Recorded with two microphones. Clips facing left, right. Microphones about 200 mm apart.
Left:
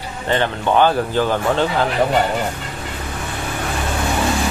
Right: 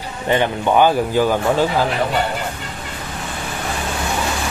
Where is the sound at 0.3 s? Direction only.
15° right (ahead or behind).